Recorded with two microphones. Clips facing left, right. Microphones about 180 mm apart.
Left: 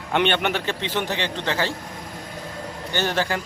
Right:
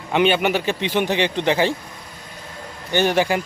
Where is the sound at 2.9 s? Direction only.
15° right (ahead or behind).